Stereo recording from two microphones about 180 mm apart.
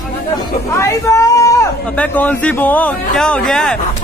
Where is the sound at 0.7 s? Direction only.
15° left (ahead or behind).